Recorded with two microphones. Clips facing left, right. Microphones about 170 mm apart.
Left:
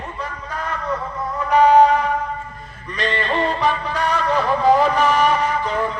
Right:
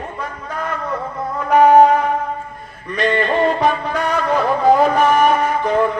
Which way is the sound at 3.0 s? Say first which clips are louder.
Right 5 dB; 50° right (ahead or behind).